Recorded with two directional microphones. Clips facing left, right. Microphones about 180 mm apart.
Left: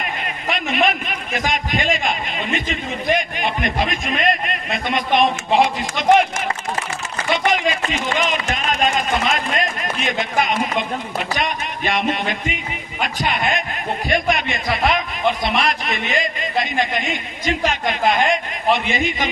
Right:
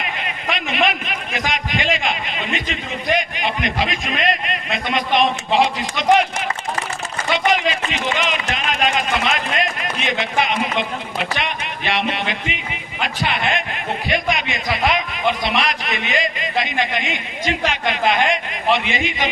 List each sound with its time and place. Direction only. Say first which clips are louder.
0.0 s a man's voice: left 1 dB; 45° left (ahead or behind)
7.3 s a man's voice: right 1 dB; 45° left (ahead or behind)
14.7 s speech: left 1 dB; centre (ahead or behind)
15.3 s a man's voice: left 1 dB; 50° left (ahead or behind)